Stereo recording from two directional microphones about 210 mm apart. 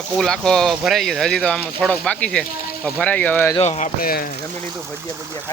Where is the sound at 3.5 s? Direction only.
30° left (ahead or behind).